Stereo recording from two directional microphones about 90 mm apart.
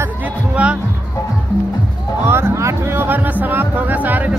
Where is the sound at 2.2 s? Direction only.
30° right (ahead or behind).